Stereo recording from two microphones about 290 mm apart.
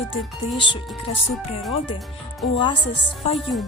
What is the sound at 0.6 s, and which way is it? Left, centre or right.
Music, centre.